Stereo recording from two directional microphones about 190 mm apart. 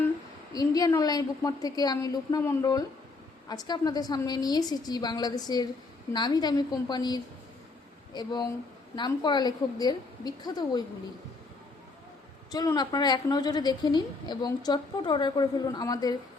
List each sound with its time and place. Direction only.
0.5 s a woman's voice: 20° left (ahead or behind)
12.5 s a woman's voice: 20° left (ahead or behind)